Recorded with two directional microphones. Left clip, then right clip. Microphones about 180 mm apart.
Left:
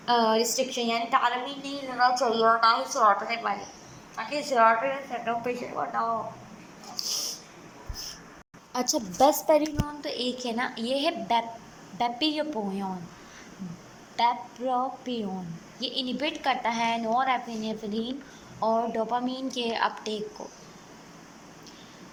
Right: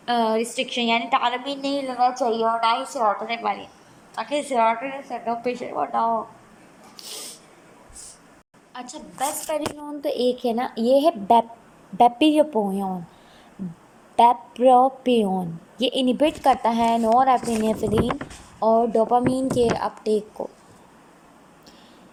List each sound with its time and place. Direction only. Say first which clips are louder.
0.0 s a woman's voice: right 1 dB; 20° right (ahead or behind)
3.2 s a woman's voice: right 4 dB; 30° right (ahead or behind)
8.7 s a woman's voice: left 7 dB; 35° left (ahead or behind)
9.5 s a woman's voice: left 3 dB; 20° left (ahead or behind)
9.8 s a woman's voice: right 9 dB; 30° right (ahead or behind)
12.5 s a woman's voice: right 8 dB; 30° right (ahead or behind)
14.2 s a woman's voice: right 9 dB; 50° right (ahead or behind)
18.6 s a woman's voice: right 8 dB; 30° right (ahead or behind)